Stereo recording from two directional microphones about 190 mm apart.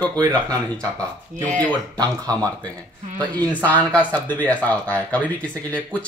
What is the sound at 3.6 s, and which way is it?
Speech, 5° left (ahead or behind).